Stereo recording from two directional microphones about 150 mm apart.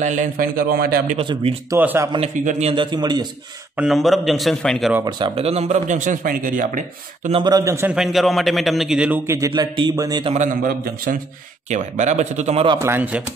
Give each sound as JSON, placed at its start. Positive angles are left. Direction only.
{"t": 0.0, "sound": "a man's voice", "side_deg": -55}
{"t": 1.1, "sound": "speech", "side_deg": -35}
{"t": 1.8, "sound": "speech", "side_deg": -10}
{"t": 2.1, "sound": "speech", "side_deg": -50}
{"t": 2.7, "sound": "a man's voice", "side_deg": -30}
{"t": 3.7, "sound": "a man's voice", "side_deg": 0}
{"t": 5.0, "sound": "speech", "side_deg": -35}
{"t": 7.4, "sound": "a man's voice", "side_deg": -25}
{"t": 7.9, "sound": "a man's voice", "side_deg": 0}
{"t": 9.5, "sound": "a man's voice", "side_deg": -30}
{"t": 10.3, "sound": "speech", "side_deg": -60}
{"t": 11.7, "sound": "speech", "side_deg": -50}
{"t": 12.8, "sound": "speech", "side_deg": -15}